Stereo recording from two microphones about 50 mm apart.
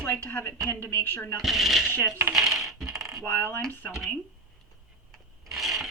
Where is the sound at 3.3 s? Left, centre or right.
Left.